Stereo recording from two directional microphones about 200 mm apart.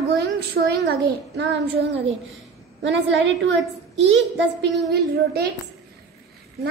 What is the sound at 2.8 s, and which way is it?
A child's voice, 65° right (ahead or behind).